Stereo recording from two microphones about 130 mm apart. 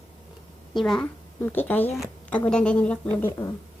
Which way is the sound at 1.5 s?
15° left (ahead or behind).